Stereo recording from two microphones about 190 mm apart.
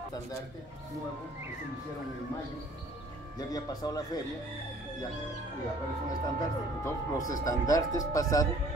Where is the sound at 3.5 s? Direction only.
20° left (ahead or behind).